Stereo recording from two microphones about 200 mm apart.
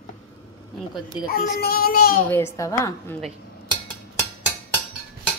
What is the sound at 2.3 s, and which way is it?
Speech, 15° left (ahead or behind).